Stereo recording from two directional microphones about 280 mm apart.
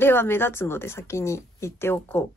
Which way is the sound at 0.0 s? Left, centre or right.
Centre.